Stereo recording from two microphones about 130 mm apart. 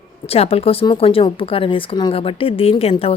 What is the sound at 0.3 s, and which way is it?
Speech, 50° left (ahead or behind).